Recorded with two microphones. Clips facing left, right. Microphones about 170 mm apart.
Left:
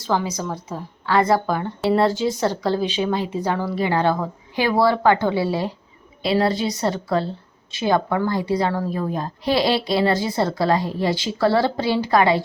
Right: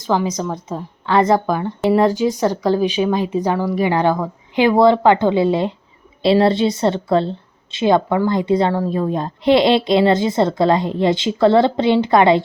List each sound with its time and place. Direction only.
0.0 s a woman's voice: 15° right (ahead or behind)